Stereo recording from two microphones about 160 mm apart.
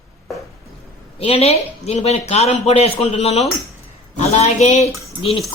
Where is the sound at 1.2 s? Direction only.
40° left (ahead or behind).